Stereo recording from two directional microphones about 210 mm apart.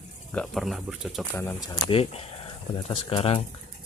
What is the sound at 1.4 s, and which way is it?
Speech, 15° left (ahead or behind).